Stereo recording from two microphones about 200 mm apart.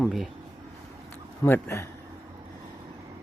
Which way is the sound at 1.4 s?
15° left (ahead or behind).